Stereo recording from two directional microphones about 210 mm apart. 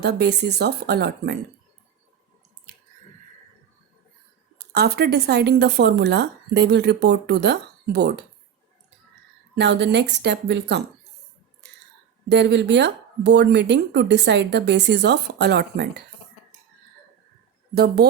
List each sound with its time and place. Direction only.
0.0 s speech: 55° right (ahead or behind)
4.5 s speech: 50° right (ahead or behind)
9.6 s speech: 55° right (ahead or behind)
12.3 s speech: 55° right (ahead or behind)
17.7 s speech: 50° right (ahead or behind)